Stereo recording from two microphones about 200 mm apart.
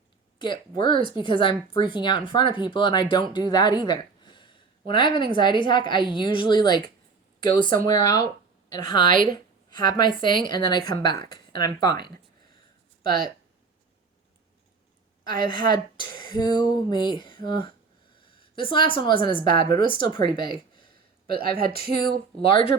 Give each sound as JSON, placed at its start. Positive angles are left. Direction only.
{"t": 0.3, "sound": "speech", "side_deg": 25}
{"t": 8.8, "sound": "speech", "side_deg": 20}
{"t": 9.0, "sound": "a woman's voice", "side_deg": -40}
{"t": 9.3, "sound": "speech", "side_deg": 20}
{"t": 13.1, "sound": "speech", "side_deg": -50}
{"t": 15.3, "sound": "speech", "side_deg": -45}
{"t": 15.6, "sound": "speech", "side_deg": 20}
{"t": 21.2, "sound": "speech", "side_deg": -50}
{"t": 22.4, "sound": "speech", "side_deg": 25}